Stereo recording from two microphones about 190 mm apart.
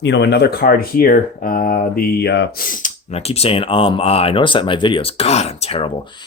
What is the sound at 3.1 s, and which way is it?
Speech, 30° left (ahead or behind).